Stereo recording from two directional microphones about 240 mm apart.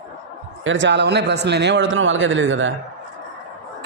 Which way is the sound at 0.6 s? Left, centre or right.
Right.